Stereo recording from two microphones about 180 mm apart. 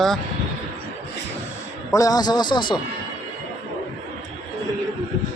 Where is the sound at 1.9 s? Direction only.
20° left (ahead or behind).